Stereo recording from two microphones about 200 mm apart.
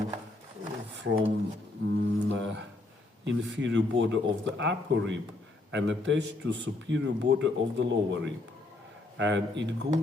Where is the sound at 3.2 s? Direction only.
65° right (ahead or behind).